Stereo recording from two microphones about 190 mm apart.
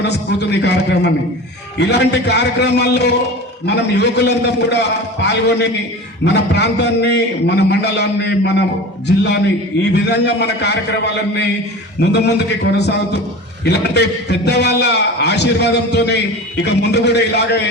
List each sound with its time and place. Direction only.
0.0 s a man's voice: 65° left (ahead or behind)